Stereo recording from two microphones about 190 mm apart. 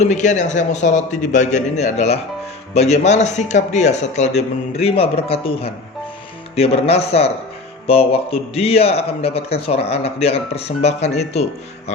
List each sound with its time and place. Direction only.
0.0 s speech: 40° left (ahead or behind)